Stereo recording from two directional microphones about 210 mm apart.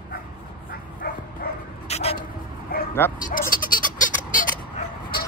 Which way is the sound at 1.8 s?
30° left (ahead or behind).